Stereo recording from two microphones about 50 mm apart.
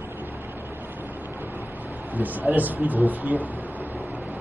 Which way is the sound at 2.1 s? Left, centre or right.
Right.